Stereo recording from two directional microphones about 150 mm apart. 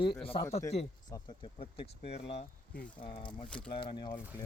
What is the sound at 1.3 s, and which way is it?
Speech, 35° left (ahead or behind).